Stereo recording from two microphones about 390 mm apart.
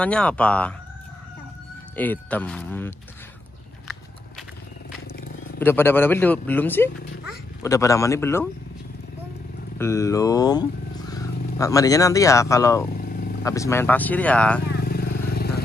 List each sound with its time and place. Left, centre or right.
0.0 s a man's voice: centre
2.0 s a man's voice: centre
5.6 s a man's voice: centre
9.8 s a man's voice: centre
14.8 s vehicle: left